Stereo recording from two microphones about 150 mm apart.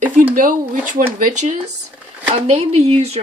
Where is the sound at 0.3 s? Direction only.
65° right (ahead or behind).